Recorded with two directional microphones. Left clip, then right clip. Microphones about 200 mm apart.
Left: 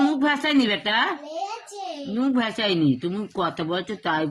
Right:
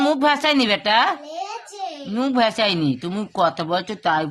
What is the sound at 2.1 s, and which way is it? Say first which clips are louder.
Speech: right 6 dB; 30° right (ahead or behind).